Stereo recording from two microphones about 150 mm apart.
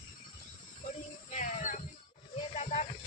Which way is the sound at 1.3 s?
55° left (ahead or behind).